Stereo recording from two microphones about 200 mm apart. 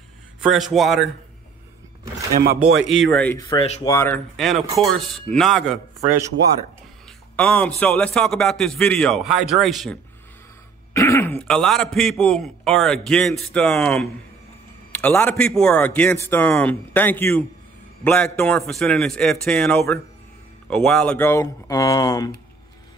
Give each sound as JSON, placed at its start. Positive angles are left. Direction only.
{"t": 0.4, "sound": "a man's voice", "side_deg": 0}
{"t": 2.3, "sound": "speech", "side_deg": -50}
{"t": 3.3, "sound": "a man's voice", "side_deg": 20}
{"t": 4.4, "sound": "a man's voice", "side_deg": 0}
{"t": 7.1, "sound": "a man's voice", "side_deg": 5}
{"t": 10.9, "sound": "a man's voice", "side_deg": 15}